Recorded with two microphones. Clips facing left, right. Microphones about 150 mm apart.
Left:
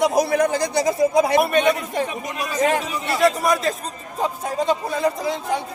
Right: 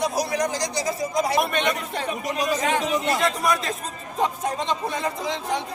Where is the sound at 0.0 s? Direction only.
60° left (ahead or behind).